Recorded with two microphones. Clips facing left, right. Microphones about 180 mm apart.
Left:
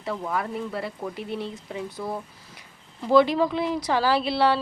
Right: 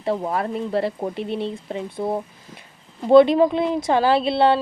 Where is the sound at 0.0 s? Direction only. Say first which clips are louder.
Right 6 dB; 30° right (ahead or behind).